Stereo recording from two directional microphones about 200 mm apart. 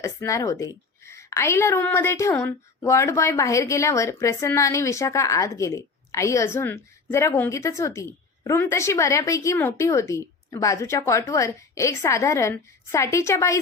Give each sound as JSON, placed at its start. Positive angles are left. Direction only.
{"t": 0.0, "sound": "a woman's voice", "side_deg": 15}